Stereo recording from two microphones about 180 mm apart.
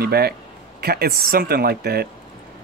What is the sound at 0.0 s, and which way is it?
Speech, 60° right (ahead or behind).